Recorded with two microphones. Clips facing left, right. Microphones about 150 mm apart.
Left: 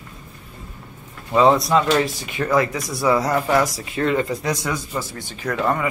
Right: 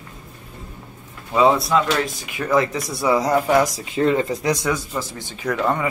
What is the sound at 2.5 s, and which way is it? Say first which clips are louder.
Speech: right 1 dB; 25° right (ahead or behind).